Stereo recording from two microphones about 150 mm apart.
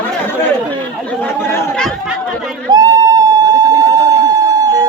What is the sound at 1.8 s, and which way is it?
Chatter, 5° left (ahead or behind).